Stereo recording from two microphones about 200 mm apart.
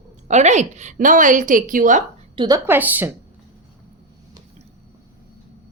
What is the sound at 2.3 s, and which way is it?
Speech, 25° right (ahead or behind).